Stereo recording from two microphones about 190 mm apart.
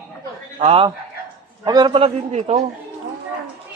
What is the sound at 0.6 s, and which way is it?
A man's voice, 30° right (ahead or behind).